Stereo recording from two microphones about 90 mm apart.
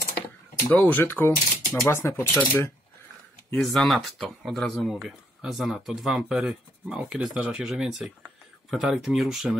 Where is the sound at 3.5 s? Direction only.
5° left (ahead or behind).